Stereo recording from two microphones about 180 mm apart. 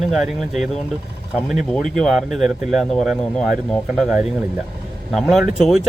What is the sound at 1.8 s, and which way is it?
Speech, centre (ahead or behind).